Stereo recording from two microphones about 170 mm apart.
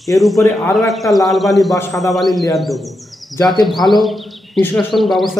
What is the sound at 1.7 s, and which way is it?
Speech, 20° left (ahead or behind).